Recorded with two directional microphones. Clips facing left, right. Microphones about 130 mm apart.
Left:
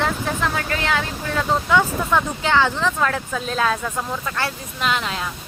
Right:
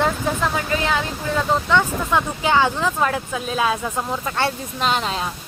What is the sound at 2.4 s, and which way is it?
Speech, 15° right (ahead or behind).